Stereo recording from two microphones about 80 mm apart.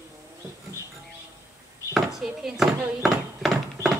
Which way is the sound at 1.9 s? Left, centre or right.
Centre.